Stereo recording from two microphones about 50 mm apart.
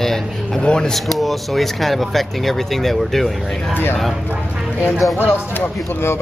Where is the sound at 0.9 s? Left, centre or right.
Centre.